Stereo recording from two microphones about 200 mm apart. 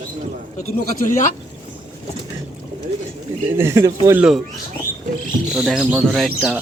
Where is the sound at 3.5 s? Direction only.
10° right (ahead or behind).